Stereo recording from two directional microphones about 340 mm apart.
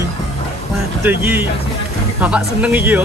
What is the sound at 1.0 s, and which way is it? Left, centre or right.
Speech, centre.